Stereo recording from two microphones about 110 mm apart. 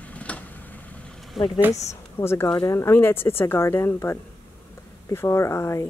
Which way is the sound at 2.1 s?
25° left (ahead or behind).